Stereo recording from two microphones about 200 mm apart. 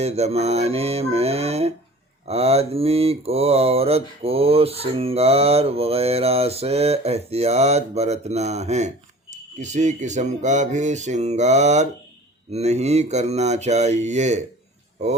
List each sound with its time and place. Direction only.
0.0 s mantra: 30° right (ahead or behind)